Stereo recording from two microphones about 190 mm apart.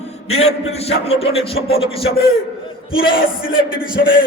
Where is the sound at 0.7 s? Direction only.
30° left (ahead or behind).